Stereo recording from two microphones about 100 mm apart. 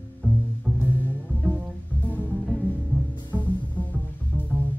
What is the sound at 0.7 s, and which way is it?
Music, 15° right (ahead or behind).